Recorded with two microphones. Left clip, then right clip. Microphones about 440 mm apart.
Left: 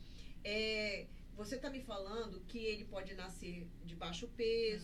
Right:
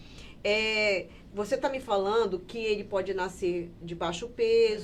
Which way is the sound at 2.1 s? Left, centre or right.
Right.